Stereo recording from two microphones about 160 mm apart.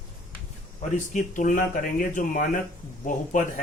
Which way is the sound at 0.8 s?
50° left (ahead or behind).